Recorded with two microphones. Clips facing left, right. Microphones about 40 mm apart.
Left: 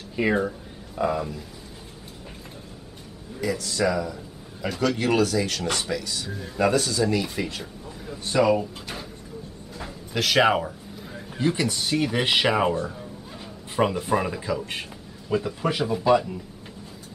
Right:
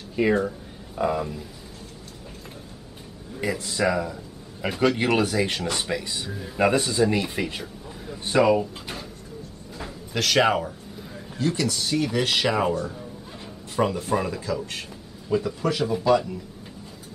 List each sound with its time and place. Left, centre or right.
0.1 s speech: centre
0.9 s speech: centre
3.3 s speech: right
6.3 s speech: centre
6.6 s speech: right
8.4 s speech: centre
9.8 s a sound: centre
11.1 s a man's voice: left